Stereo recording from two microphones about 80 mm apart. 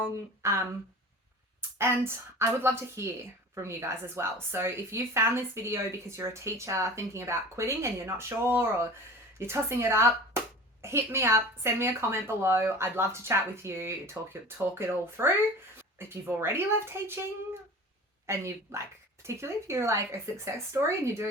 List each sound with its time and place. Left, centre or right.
0.4 s a woman's voice: right
1.8 s a woman's voice: right